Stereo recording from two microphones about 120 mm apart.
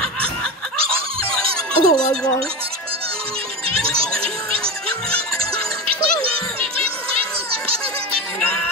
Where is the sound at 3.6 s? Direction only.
50° right (ahead or behind).